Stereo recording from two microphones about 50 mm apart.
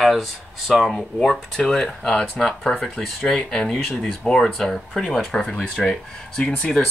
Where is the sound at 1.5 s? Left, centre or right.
Centre.